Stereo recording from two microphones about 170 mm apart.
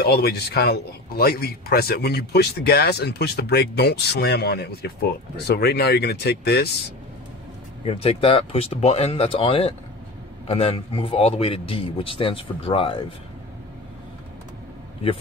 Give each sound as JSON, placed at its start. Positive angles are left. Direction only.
{"t": 0.0, "sound": "a man's voice", "side_deg": 70}
{"t": 7.8, "sound": "speech", "side_deg": 35}